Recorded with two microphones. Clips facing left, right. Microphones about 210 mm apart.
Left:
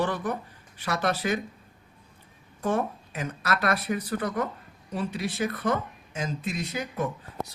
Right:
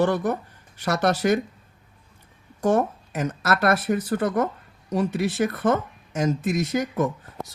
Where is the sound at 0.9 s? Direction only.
75° right (ahead or behind).